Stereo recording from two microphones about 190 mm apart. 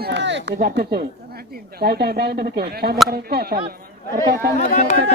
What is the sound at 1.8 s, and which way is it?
Speech, 55° right (ahead or behind).